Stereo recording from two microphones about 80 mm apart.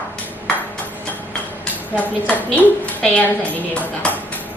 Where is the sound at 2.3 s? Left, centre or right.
Centre.